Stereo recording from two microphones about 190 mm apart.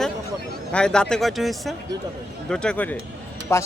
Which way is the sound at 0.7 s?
5° left (ahead or behind).